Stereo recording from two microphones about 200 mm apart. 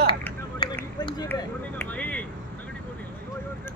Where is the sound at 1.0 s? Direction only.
20° left (ahead or behind).